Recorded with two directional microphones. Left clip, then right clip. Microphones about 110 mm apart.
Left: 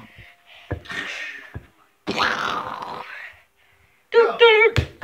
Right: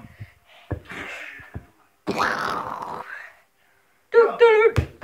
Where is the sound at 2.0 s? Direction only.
30° right (ahead or behind).